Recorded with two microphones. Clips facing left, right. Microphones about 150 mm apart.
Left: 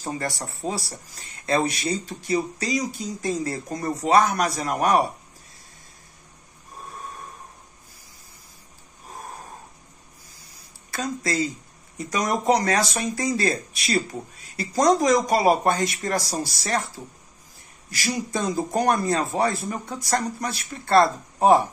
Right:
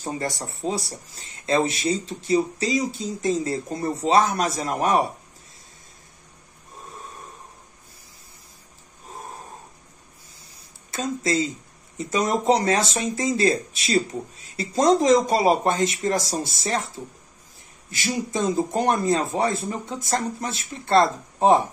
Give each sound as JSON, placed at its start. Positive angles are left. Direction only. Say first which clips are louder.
{"t": 0.1, "sound": "speech", "louder": "even", "side_deg": -20}
{"t": 10.4, "sound": "a sound", "louder": "even", "side_deg": -25}
{"t": 12.0, "sound": "speech", "louder": "right 2 dB", "side_deg": -25}
{"t": 18.3, "sound": "speech", "louder": "right 2 dB", "side_deg": -25}